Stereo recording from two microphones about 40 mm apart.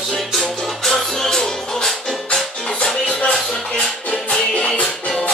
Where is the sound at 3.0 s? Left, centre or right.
Left.